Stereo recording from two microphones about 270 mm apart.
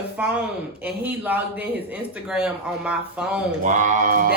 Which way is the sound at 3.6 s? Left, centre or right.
Right.